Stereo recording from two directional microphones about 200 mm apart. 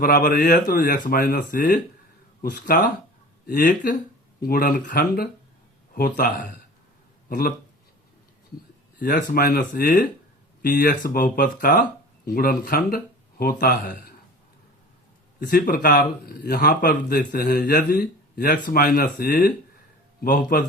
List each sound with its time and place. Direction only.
0.0 s a man's voice: 45° left (ahead or behind)
9.1 s a man's voice: 50° left (ahead or behind)
15.4 s a man's voice: 45° left (ahead or behind)